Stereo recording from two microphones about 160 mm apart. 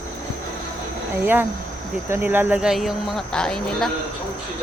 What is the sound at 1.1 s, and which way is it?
Speech, 10° right (ahead or behind).